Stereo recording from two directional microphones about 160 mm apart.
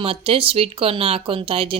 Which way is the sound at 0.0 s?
35° right (ahead or behind).